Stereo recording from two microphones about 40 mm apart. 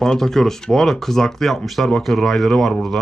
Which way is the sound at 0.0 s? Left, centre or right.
Centre.